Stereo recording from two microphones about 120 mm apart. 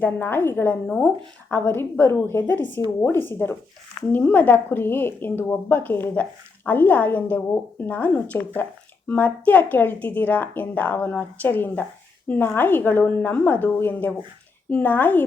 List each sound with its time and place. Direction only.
0.0 s speech: 15° left (ahead or behind)